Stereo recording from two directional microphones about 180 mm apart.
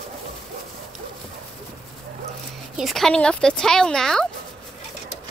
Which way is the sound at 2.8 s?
Centre (ahead or behind).